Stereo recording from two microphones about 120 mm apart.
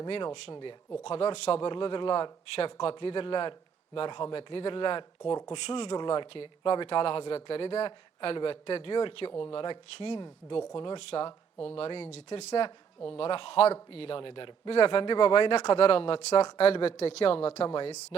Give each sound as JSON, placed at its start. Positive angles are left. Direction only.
{"t": 0.1, "sound": "speech", "side_deg": 45}
{"t": 1.0, "sound": "speech", "side_deg": 55}